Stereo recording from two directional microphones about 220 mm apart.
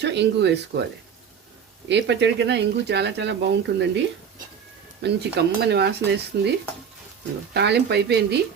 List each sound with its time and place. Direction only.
0.0 s speech: 50° right (ahead or behind)
1.9 s speech: 50° right (ahead or behind)
5.0 s speech: 50° right (ahead or behind)
7.5 s speech: 50° right (ahead or behind)